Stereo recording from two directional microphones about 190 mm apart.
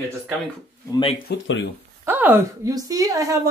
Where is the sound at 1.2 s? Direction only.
75° left (ahead or behind).